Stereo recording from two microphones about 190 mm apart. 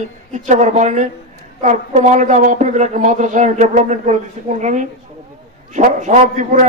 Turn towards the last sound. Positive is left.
turn(degrees=-40)  # may be behind; listen again after turning